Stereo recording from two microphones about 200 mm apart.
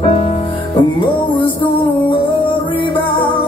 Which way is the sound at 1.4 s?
25° left (ahead or behind).